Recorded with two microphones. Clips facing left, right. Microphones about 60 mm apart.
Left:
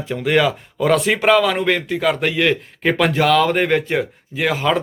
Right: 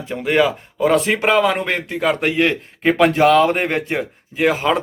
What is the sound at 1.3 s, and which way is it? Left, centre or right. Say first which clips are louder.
Speech: left 2 dB; right.